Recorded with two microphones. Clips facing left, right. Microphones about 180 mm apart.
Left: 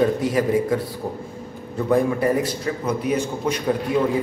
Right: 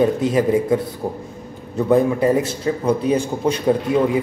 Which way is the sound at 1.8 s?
20° right (ahead or behind).